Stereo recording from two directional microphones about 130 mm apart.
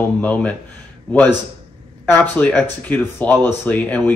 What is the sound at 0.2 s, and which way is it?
Speech, 10° left (ahead or behind).